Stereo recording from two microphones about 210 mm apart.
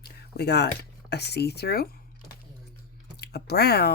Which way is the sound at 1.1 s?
50° left (ahead or behind).